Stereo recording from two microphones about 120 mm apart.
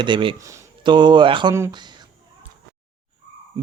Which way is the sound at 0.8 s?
40° right (ahead or behind).